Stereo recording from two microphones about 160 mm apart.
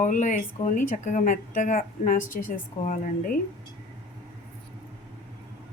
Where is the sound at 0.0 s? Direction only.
50° left (ahead or behind).